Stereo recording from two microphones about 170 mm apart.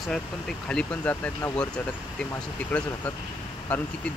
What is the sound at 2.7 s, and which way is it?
Speech, 10° left (ahead or behind).